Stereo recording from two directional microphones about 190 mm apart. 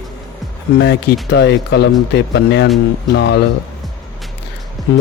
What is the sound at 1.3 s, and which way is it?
A man's voice, 65° left (ahead or behind).